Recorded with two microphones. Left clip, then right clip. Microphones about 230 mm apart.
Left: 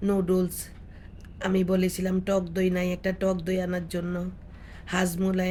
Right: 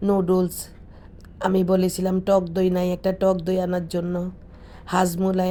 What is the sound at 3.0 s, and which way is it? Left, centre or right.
Speech, centre.